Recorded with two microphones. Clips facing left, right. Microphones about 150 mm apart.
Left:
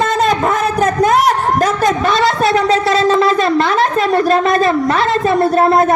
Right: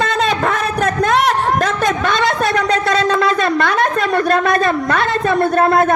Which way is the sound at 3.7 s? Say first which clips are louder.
Left 3 dB; centre (ahead or behind).